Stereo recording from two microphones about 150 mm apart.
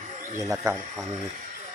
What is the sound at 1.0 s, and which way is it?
Speech, 55° right (ahead or behind).